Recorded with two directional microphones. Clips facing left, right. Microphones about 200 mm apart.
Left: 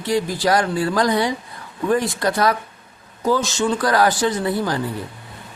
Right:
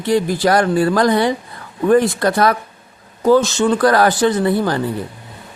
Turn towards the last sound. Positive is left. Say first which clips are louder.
# right 5 dB
turn(degrees=-60)  # may be behind; listen again after turning